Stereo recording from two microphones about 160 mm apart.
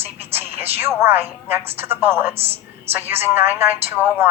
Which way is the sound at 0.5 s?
40° right (ahead or behind).